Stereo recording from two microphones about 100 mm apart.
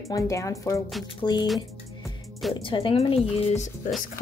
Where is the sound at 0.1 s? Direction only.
30° left (ahead or behind).